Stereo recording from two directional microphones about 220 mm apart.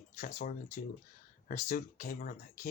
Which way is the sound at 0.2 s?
40° left (ahead or behind).